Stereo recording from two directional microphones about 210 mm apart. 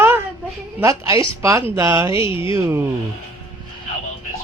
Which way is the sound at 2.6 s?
10° right (ahead or behind).